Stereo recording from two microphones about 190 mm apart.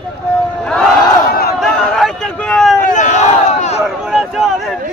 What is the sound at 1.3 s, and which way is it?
Battle cry, 55° left (ahead or behind).